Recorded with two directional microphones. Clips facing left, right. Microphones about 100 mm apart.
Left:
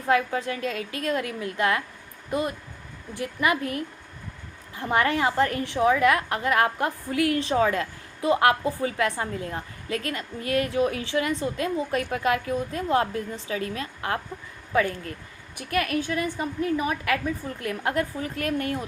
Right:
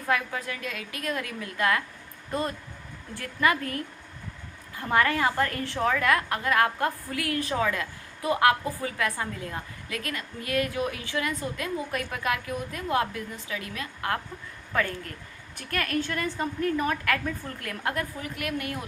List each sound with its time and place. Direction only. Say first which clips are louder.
0.1 s a woman's voice: left 5 dB; 30° left (ahead or behind)
15.5 s a woman's voice: left 3 dB; 15° left (ahead or behind)
17.6 s a woman's voice: left 5 dB; 25° left (ahead or behind)